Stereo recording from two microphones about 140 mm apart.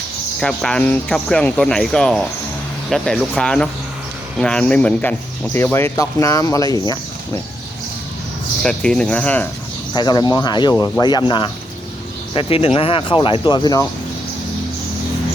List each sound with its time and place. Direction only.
0.3 s speech: 5° left (ahead or behind); by 7.4 s 30° left (ahead or behind)
8.6 s speech: 5° left (ahead or behind)
9.9 s speech: 30° left (ahead or behind)